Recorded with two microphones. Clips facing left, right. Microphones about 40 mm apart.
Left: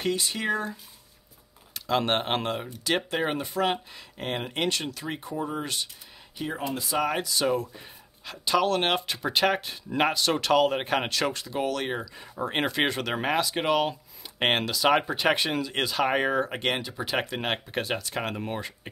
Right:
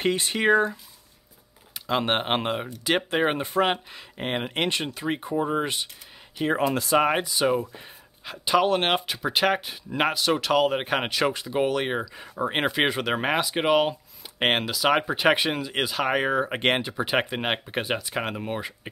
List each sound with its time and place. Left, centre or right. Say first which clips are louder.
0.0 s speech: right 5 dB; right
1.7 s speech: right 1 dB; centre
3.4 s speech: right 3 dB; right
3.7 s speech: right 1 dB; right
6.5 s speech: right 9 dB; right
7.0 s speech: right 2 dB; right
9.0 s speech: right 1 dB; centre
16.4 s speech: right 5 dB; right; by 18.7 s centre